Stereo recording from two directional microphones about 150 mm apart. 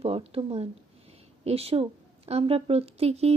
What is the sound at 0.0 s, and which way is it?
Speech, 40° right (ahead or behind).